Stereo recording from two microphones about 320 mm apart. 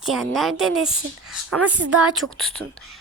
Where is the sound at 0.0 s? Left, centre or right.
Centre.